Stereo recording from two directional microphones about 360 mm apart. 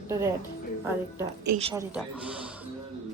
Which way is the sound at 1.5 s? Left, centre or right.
Centre.